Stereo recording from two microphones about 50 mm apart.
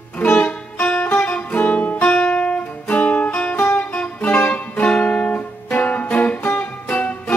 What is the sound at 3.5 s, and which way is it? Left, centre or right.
Music, left.